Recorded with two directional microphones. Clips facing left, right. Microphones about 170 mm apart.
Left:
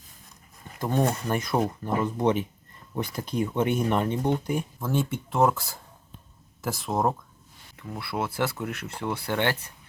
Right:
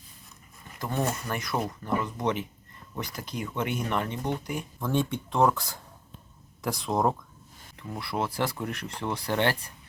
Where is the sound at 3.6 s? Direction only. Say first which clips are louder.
Left 4 dB; 30° left (ahead or behind).